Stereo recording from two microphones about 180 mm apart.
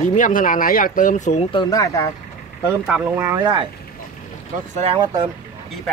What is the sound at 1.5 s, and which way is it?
Speech, 20° left (ahead or behind).